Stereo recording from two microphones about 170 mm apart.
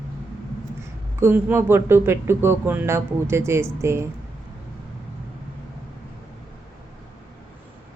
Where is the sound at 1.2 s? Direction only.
15° right (ahead or behind).